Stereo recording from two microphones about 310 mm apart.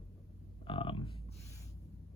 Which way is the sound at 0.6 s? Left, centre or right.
Centre.